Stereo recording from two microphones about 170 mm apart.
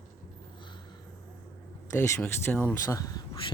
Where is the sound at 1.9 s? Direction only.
15° left (ahead or behind).